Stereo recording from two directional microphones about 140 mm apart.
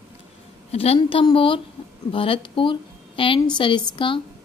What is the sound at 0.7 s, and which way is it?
A woman's voice, 45° left (ahead or behind).